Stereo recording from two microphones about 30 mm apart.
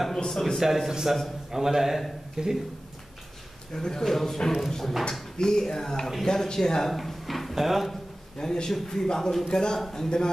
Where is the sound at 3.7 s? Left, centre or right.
Left.